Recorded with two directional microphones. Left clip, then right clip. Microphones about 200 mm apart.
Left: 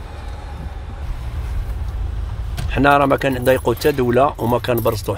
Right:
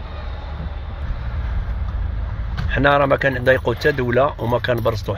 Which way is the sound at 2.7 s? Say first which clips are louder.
Left 2 dB; 10° left (ahead or behind).